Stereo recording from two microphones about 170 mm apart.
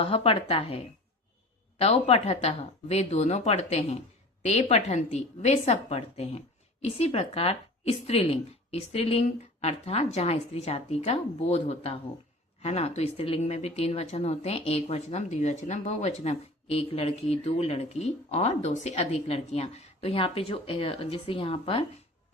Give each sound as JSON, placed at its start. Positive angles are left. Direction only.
{"t": 0.0, "sound": "speech", "side_deg": 35}